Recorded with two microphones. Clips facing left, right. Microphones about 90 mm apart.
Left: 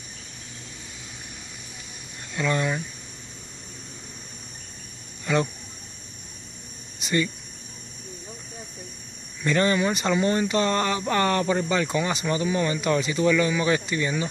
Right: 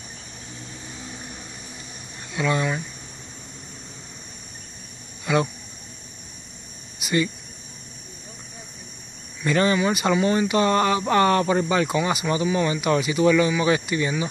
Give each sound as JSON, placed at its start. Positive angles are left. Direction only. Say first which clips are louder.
{"t": 2.3, "sound": "speech", "louder": "right 2 dB", "side_deg": -10}
{"t": 5.2, "sound": "a sound", "louder": "right 2 dB", "side_deg": -10}
{"t": 7.0, "sound": "cricket", "louder": "right 2 dB", "side_deg": -10}
{"t": 9.4, "sound": "speech", "louder": "right 2 dB", "side_deg": -15}